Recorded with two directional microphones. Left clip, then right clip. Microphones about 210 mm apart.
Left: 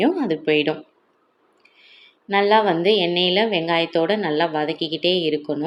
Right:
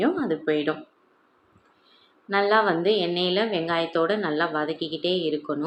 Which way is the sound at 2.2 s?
15° left (ahead or behind).